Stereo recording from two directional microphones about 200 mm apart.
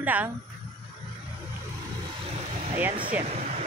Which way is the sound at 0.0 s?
10° right (ahead or behind).